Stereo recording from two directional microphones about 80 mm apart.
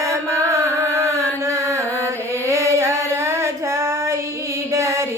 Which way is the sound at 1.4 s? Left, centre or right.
Right.